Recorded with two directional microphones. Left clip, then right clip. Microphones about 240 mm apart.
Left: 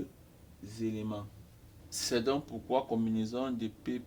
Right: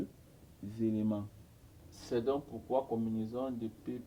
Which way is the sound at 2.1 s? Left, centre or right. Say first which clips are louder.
Left 1 dB; left.